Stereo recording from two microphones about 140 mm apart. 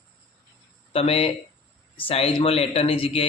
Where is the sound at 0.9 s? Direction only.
45° left (ahead or behind).